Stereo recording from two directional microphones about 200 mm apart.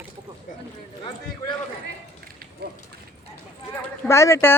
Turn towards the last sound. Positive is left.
turn(degrees=15)  # may be behind; listen again after turning